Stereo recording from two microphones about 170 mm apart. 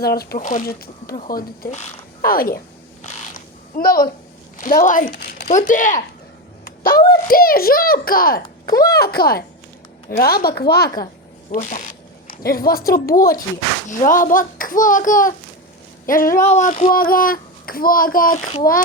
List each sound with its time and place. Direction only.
0.0 s speech: 65° left (ahead or behind)
0.3 s speech: 50° left (ahead or behind)
3.0 s a sound: 40° left (ahead or behind)
3.8 s a woman's voice: 60° left (ahead or behind)
5.5 s a child's voice: 50° left (ahead or behind)
6.7 s a sound: 65° left (ahead or behind)
7.1 s speech: 60° left (ahead or behind)
8.6 s speech: 20° left (ahead or behind)
8.9 s speech: 65° left (ahead or behind)
11.5 s a child's voice: 45° left (ahead or behind)
12.3 s a child's voice: 60° left (ahead or behind)
18.3 s a child's voice: 35° left (ahead or behind)